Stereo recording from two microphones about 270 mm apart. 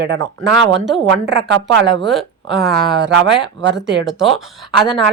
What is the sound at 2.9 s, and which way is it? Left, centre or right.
Speech, right.